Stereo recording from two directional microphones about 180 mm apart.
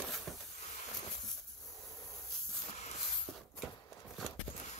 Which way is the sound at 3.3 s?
5° left (ahead or behind).